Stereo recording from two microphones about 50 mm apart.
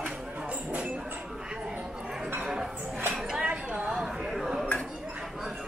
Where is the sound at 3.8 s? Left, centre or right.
Centre.